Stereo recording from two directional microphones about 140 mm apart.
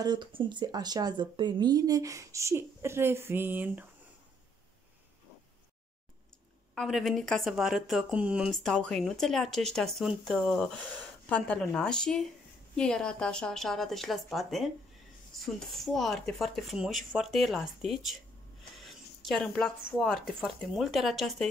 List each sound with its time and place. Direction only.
0.0 s speech: 35° right (ahead or behind); by 3.8 s 15° right (ahead or behind)
6.7 s speech: centre (ahead or behind)
8.5 s speech: 5° left (ahead or behind)